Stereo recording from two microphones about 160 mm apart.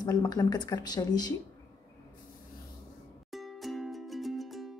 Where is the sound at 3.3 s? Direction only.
Centre (ahead or behind).